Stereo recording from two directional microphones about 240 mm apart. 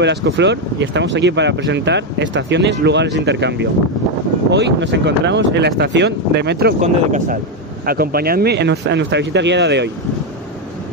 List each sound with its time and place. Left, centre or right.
0.0 s speech: right
6.8 s speech: right